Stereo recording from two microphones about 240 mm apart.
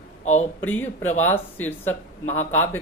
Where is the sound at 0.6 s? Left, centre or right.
Centre.